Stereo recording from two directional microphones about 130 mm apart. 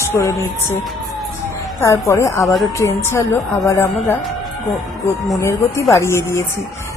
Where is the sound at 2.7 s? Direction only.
20° left (ahead or behind).